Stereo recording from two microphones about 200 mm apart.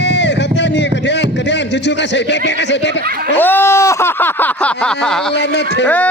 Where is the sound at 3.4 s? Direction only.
10° left (ahead or behind).